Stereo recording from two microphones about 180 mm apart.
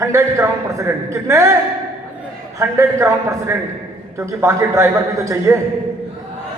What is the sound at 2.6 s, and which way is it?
A man's voice, 15° right (ahead or behind).